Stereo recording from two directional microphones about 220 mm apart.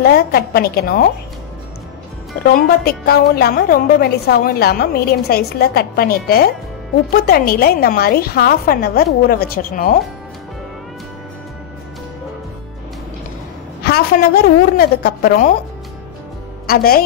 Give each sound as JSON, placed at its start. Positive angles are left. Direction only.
{"t": 0.0, "sound": "a woman's voice", "side_deg": 45}
{"t": 2.4, "sound": "a woman's voice", "side_deg": 45}
{"t": 13.8, "sound": "a woman's voice", "side_deg": 45}
{"t": 16.6, "sound": "a woman's voice", "side_deg": 45}